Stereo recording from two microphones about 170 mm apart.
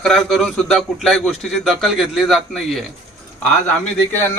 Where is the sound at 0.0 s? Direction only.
Centre (ahead or behind).